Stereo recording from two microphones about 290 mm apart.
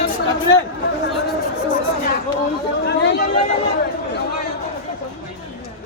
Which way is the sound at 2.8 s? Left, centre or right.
Left.